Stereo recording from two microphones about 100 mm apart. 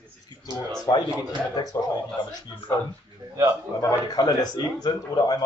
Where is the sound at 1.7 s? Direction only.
30° left (ahead or behind).